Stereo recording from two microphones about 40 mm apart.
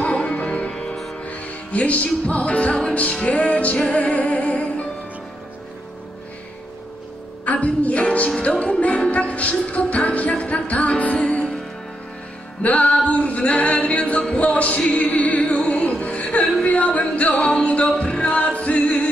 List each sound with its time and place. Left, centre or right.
0.1 s music: left
7.4 s music: left
12.6 s singing: left
14.2 s music: left
15.5 s music: left
16.0 s music: left
17.9 s choir: left